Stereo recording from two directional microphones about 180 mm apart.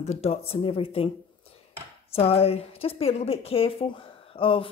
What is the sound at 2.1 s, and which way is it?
A woman's voice, 35° left (ahead or behind).